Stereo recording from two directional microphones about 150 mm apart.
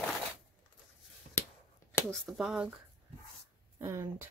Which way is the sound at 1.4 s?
10° left (ahead or behind).